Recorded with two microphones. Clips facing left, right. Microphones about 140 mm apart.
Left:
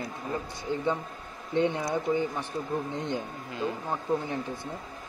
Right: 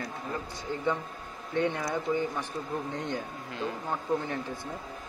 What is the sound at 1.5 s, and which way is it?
Speech, 20° left (ahead or behind).